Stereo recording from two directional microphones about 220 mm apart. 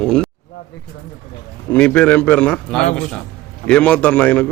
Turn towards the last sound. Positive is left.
turn(degrees=5)  # may be behind; listen again after turning